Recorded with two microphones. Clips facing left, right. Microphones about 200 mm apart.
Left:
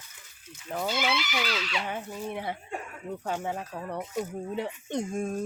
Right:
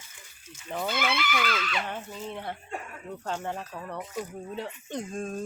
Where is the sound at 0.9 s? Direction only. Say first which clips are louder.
Right 1 dB; 55° right (ahead or behind).